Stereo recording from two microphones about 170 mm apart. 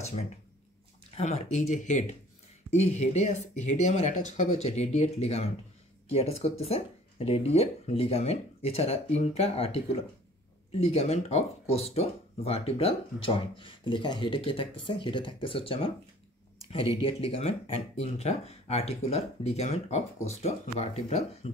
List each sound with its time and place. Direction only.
1.1 s speech: 40° left (ahead or behind)
10.9 s speech: 40° left (ahead or behind)